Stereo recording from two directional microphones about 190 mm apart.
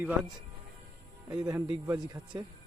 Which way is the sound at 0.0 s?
5° right (ahead or behind).